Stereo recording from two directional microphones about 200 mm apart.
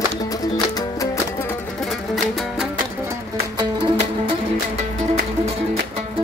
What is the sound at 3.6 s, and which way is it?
Music, 20° right (ahead or behind).